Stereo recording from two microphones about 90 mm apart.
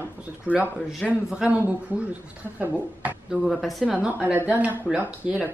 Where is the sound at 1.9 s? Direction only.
20° right (ahead or behind).